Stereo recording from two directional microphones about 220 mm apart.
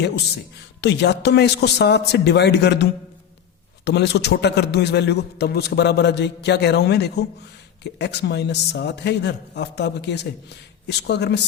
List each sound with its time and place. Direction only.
0.8 s a man's voice: 50° left (ahead or behind)
3.8 s a man's voice: 50° left (ahead or behind)